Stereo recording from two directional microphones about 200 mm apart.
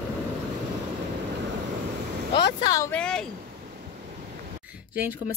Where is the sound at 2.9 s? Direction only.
5° left (ahead or behind).